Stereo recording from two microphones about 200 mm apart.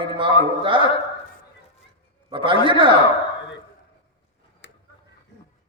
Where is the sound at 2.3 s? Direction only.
25° right (ahead or behind).